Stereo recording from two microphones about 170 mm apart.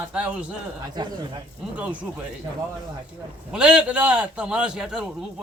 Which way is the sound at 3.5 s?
5° right (ahead or behind).